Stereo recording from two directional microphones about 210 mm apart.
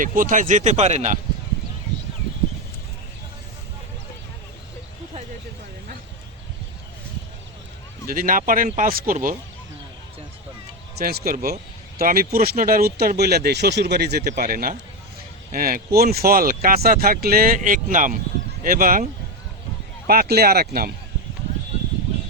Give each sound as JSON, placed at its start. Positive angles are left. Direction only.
{"t": 0.0, "sound": "speech", "side_deg": -40}
{"t": 8.0, "sound": "speech", "side_deg": -40}
{"t": 10.9, "sound": "speech", "side_deg": -45}
{"t": 20.1, "sound": "speech", "side_deg": -45}